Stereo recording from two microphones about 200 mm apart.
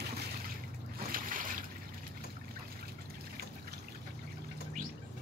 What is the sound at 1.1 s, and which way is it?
Boat, 45° right (ahead or behind).